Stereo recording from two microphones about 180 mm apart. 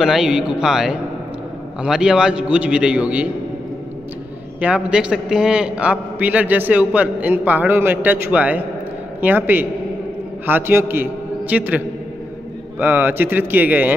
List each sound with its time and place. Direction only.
0.0 s a man's voice: centre (ahead or behind)
4.6 s a man's voice: 5° right (ahead or behind)